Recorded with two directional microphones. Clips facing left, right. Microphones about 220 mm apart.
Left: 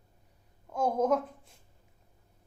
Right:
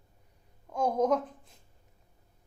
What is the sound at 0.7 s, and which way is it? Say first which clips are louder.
Speech: even; 5° left (ahead or behind).